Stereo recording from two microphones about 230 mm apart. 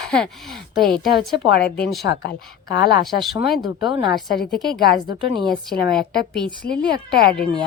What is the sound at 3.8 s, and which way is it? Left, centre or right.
Speech, centre.